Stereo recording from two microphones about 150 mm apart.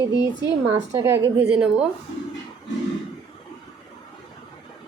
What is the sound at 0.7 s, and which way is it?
Speech, 15° right (ahead or behind).